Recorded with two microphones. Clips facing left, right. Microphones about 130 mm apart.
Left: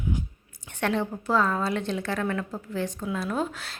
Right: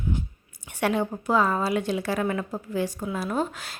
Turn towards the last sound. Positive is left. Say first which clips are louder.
# right 1 dB
turn(degrees=0)  # may be behind; listen again after turning